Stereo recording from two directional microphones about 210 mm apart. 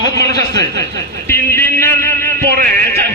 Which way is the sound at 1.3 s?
10° left (ahead or behind).